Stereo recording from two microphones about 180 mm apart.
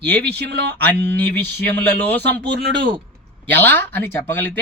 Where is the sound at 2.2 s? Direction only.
70° right (ahead or behind).